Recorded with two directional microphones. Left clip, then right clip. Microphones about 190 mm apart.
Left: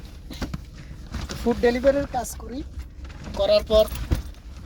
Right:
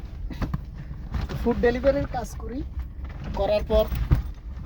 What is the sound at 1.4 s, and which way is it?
Speech, 10° right (ahead or behind).